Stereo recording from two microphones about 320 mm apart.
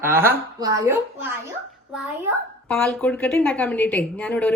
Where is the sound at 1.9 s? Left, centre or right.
Centre.